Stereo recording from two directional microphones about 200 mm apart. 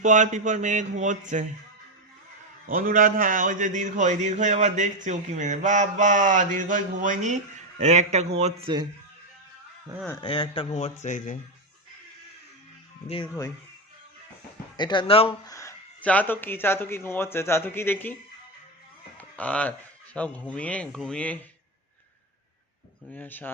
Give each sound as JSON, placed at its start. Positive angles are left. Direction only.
{"t": 0.0, "sound": "a man's voice", "side_deg": -40}
{"t": 2.6, "sound": "a man's voice", "side_deg": -45}
{"t": 10.1, "sound": "speech", "side_deg": 25}
{"t": 14.8, "sound": "speech", "side_deg": 25}
{"t": 15.5, "sound": "speech", "side_deg": 10}
{"t": 19.1, "sound": "a sound", "side_deg": 5}
{"t": 20.1, "sound": "speech", "side_deg": 5}
{"t": 23.1, "sound": "speech", "side_deg": 10}